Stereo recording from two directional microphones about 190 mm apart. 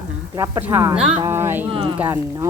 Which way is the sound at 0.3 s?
15° right (ahead or behind).